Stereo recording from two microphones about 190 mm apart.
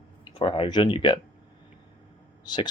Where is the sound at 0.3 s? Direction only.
30° left (ahead or behind).